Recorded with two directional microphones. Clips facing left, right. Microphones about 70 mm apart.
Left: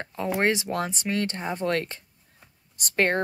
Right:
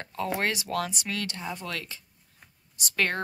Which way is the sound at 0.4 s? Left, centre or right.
Left.